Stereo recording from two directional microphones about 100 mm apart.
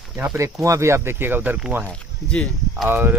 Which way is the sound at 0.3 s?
30° right (ahead or behind).